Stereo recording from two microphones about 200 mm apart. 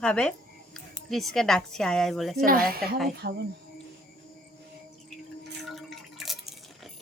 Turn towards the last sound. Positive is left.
turn(degrees=0)  # may be behind; listen again after turning